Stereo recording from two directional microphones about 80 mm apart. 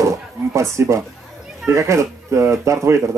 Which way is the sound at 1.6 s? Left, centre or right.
Right.